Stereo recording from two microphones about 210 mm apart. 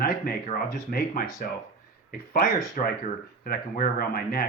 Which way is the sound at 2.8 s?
35° left (ahead or behind).